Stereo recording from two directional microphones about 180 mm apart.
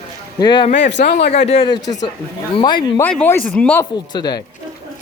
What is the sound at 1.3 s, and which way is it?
Speech, 35° left (ahead or behind).